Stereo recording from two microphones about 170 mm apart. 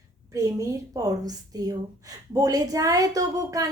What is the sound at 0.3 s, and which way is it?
A woman's voice, 20° right (ahead or behind).